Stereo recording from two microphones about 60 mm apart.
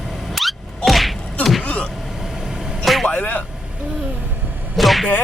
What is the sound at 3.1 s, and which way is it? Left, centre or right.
Vehicle, left.